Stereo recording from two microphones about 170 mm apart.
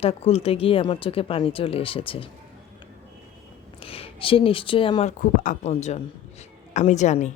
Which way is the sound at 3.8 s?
35° left (ahead or behind).